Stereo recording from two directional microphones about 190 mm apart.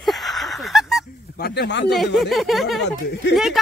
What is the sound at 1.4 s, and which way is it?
Speech, 60° left (ahead or behind).